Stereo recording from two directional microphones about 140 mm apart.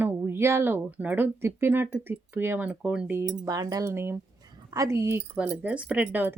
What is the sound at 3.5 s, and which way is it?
Speech, 25° right (ahead or behind).